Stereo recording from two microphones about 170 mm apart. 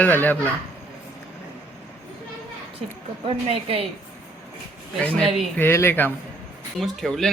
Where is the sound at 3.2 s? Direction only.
35° right (ahead or behind).